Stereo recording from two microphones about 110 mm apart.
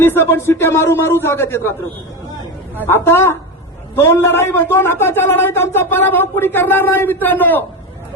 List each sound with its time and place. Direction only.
0.0 s a man's voice: 20° left (ahead or behind)
2.7 s a man's voice: 20° left (ahead or behind)